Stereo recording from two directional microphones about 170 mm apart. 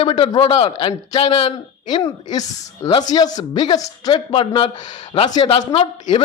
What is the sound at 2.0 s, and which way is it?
A man's voice, 20° left (ahead or behind).